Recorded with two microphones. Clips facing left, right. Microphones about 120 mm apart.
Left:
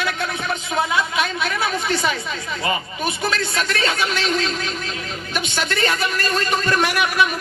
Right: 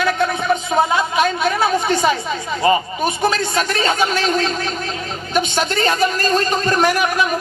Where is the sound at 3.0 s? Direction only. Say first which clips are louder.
Right 3 dB; 45° right (ahead or behind).